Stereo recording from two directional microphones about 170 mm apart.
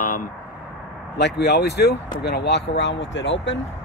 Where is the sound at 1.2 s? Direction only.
85° left.